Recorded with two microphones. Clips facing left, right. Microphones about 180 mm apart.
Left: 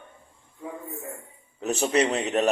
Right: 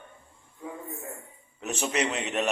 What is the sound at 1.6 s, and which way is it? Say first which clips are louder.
Speech: left 6 dB; 35° left (ahead or behind).